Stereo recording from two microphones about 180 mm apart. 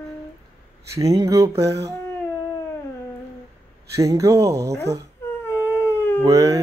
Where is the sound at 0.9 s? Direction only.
20° right (ahead or behind).